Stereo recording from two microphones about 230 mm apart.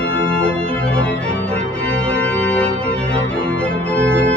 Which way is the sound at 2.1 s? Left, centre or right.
Centre.